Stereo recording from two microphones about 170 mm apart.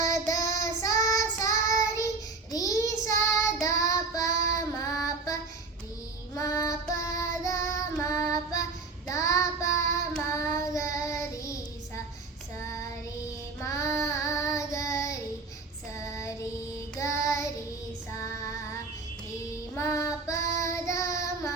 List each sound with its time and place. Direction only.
0.1 s child singing: 20° left (ahead or behind)
19.7 s child singing: 15° left (ahead or behind)